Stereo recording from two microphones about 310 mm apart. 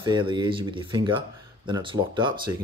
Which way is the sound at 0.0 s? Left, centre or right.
Centre.